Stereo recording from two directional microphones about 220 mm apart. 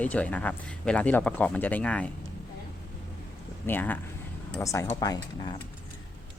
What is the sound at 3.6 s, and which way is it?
Speech, 10° left (ahead or behind).